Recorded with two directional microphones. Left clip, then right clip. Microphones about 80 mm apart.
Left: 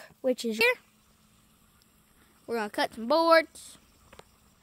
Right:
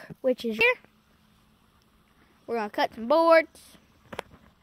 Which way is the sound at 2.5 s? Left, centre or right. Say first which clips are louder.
Right 2 dB; centre.